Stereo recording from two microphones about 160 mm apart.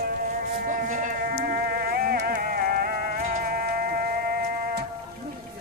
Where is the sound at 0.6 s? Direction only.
55° right (ahead or behind).